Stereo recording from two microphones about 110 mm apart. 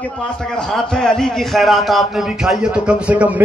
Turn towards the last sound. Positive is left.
turn(degrees=-10)  # may be behind; listen again after turning